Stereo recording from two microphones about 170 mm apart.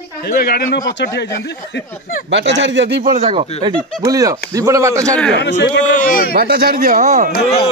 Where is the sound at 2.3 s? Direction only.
90° right.